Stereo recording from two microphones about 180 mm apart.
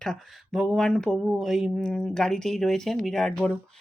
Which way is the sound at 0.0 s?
Centre (ahead or behind).